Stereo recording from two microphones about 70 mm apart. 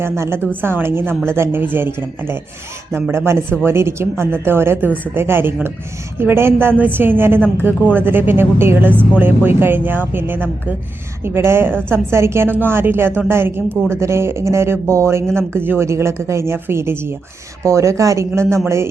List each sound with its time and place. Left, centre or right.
0.0 s a woman's voice: right
15.4 s a woman's voice: right
17.6 s speech: right